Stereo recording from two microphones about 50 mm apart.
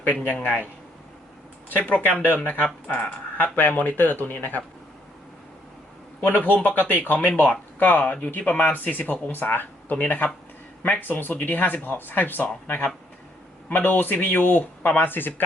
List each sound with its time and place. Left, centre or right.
1.8 s speech: left
2.4 s speech: left
6.1 s speech: left
8.0 s speech: centre
8.3 s speech: left